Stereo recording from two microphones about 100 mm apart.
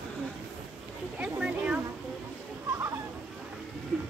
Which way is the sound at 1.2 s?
15° right (ahead or behind).